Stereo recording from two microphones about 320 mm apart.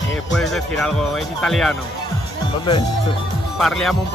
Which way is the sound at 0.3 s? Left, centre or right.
Centre.